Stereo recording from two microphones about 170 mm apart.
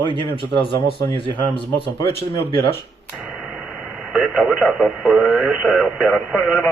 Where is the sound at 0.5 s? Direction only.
30° left (ahead or behind).